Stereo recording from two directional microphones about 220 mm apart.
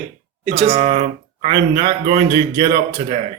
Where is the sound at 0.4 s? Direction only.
30° right (ahead or behind).